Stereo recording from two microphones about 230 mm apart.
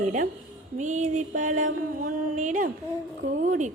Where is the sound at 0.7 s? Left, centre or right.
Right.